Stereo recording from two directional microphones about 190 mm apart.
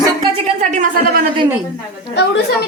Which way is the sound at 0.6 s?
40° right (ahead or behind).